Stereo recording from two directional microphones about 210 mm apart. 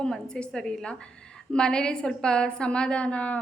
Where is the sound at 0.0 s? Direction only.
5° left (ahead or behind).